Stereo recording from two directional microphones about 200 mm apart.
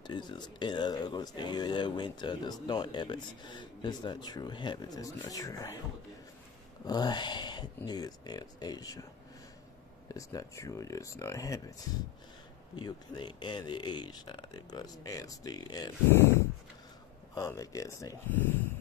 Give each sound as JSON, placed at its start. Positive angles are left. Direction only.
{"t": 0.0, "sound": "speech", "side_deg": 20}
{"t": 6.9, "sound": "speech", "side_deg": 20}
{"t": 10.1, "sound": "speech", "side_deg": 15}
{"t": 12.7, "sound": "speech", "side_deg": 20}